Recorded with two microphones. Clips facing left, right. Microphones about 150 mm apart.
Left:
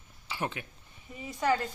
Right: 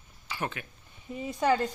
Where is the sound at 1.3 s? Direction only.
20° right (ahead or behind).